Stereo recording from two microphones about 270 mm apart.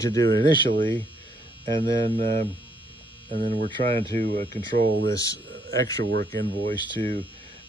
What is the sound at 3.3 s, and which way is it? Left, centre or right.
Speech, right.